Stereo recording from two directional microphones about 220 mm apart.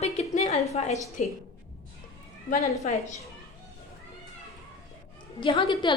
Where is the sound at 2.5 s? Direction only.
35° left (ahead or behind).